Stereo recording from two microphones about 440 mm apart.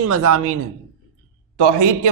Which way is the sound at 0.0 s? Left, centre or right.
Right.